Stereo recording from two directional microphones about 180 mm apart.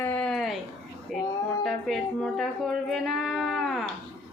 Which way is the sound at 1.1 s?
Centre (ahead or behind).